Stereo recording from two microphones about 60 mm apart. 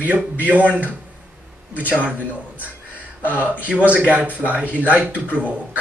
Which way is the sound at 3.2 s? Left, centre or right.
Right.